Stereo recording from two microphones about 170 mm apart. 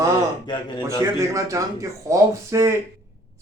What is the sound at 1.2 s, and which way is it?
Speech, 20° right (ahead or behind).